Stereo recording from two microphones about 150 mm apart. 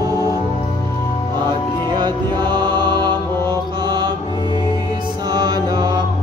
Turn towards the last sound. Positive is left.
turn(degrees=-25)  # may be behind; listen again after turning